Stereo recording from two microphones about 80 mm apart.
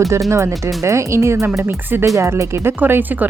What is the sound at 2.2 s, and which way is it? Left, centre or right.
Speech, right.